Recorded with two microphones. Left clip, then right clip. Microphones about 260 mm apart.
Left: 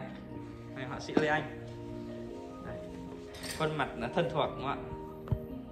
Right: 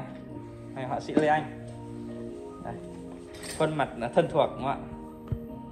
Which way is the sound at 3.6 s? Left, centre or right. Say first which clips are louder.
Right 6 dB; centre.